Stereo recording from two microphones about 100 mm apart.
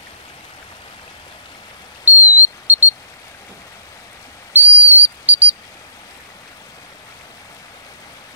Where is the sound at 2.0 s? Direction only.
20° right (ahead or behind).